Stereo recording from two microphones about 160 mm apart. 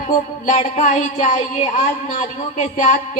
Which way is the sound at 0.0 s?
45° left (ahead or behind).